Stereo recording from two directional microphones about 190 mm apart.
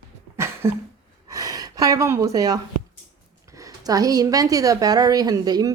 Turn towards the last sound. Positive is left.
turn(degrees=-20)  # may be behind; listen again after turning